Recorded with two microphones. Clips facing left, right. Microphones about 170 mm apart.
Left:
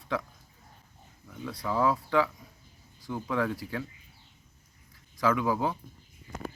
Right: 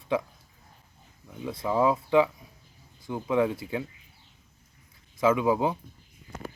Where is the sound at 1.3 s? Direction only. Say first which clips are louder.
Right 4 dB; 20° right (ahead or behind).